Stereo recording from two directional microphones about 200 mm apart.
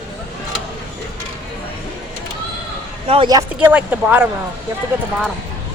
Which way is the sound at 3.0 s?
25° right (ahead or behind).